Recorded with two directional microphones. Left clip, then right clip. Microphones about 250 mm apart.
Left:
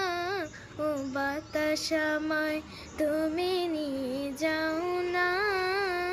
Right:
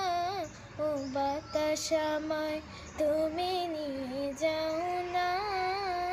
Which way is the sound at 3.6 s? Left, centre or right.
Left.